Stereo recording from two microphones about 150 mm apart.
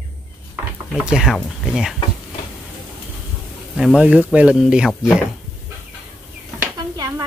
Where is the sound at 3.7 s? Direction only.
Centre (ahead or behind).